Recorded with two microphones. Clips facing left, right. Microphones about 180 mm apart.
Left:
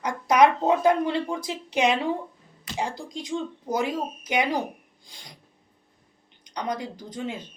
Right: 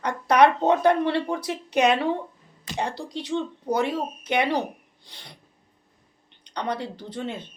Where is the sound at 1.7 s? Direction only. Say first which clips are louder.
Right 2 dB; 65° right (ahead or behind).